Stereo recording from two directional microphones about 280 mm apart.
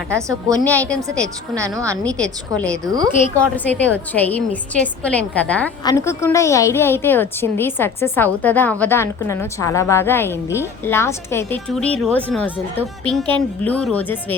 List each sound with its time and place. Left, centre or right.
0.1 s a woman's voice: centre
0.6 s speech: centre
1.5 s a woman's voice: centre
2.0 s speech: centre
2.8 s a woman's voice: centre
3.3 s a woman's voice: centre